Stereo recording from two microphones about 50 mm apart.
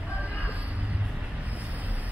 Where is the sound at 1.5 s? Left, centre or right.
Right.